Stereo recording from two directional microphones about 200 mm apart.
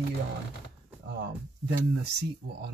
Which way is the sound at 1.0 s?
60° right (ahead or behind).